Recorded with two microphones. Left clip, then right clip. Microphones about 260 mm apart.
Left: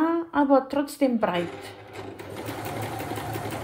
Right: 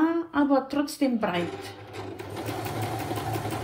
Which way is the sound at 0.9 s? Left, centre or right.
Left.